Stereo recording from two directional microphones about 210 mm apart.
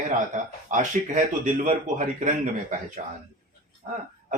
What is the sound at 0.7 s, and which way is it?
Speech, 35° right (ahead or behind).